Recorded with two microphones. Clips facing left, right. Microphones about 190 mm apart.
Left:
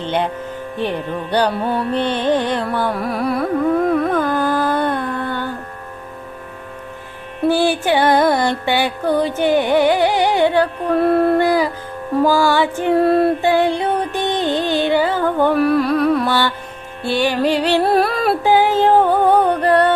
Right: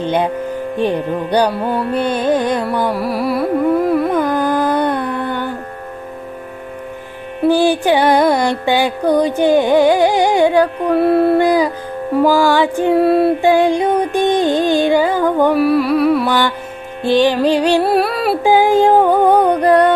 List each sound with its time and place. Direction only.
0.0 s music: 15° right (ahead or behind)
2.9 s carnatic music: 5° right (ahead or behind)
4.1 s carnatic music: 15° right (ahead or behind)
7.4 s music: 15° right (ahead or behind)
11.4 s music: 15° right (ahead or behind)
13.4 s music: 15° right (ahead or behind)
17.0 s music: 15° right (ahead or behind)
17.8 s music: centre (ahead or behind)
18.4 s music: 10° right (ahead or behind)